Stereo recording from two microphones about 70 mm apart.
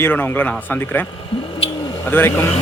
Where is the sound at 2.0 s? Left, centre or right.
Left.